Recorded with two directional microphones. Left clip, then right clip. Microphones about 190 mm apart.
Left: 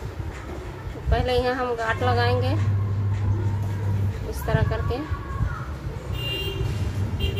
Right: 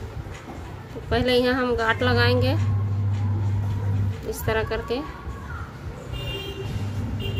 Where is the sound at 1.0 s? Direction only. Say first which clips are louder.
Right 2 dB; 50° right (ahead or behind).